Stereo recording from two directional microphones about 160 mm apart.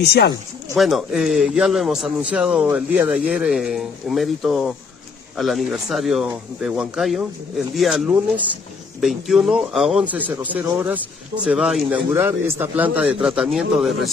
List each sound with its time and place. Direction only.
0.0 s speech: 90° left
0.7 s a man's voice: centre (ahead or behind)